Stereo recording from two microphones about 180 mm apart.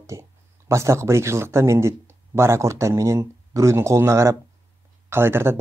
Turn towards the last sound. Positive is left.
turn(degrees=-15)  # may be behind; listen again after turning